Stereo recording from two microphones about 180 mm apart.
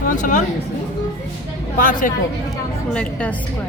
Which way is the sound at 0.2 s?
45° left (ahead or behind).